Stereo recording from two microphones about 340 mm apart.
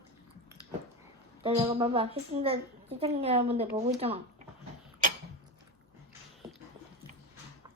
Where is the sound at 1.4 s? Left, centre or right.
Centre.